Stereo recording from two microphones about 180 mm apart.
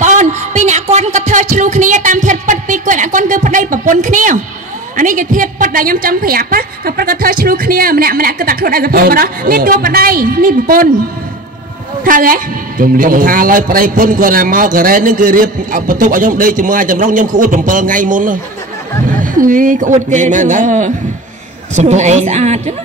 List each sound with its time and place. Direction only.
0.0 s music: 45° right (ahead or behind)
4.9 s a man's voice: 45° right (ahead or behind)
12.0 s a man's voice: 50° right (ahead or behind)